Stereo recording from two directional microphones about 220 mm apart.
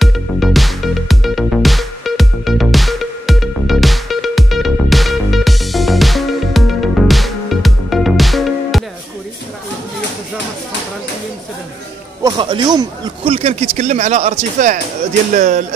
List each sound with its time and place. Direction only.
0.0 s music: centre (ahead or behind)
12.2 s speech: 20° right (ahead or behind)